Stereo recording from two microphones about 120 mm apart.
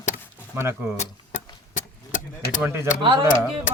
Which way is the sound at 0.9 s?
80° left.